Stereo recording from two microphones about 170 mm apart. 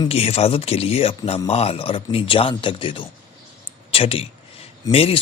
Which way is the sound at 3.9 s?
35° left (ahead or behind).